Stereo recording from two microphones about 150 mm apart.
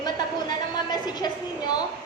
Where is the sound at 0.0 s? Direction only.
30° left (ahead or behind).